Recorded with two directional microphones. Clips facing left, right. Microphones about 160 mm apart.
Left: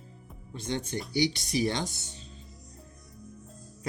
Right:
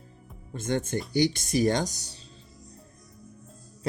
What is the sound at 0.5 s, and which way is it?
Speech, 50° right (ahead or behind).